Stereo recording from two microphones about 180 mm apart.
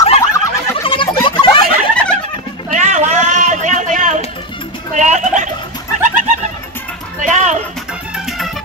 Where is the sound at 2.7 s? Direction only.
40° right (ahead or behind).